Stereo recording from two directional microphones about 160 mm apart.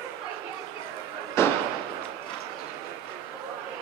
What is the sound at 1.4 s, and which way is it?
Fireworks, 15° left (ahead or behind).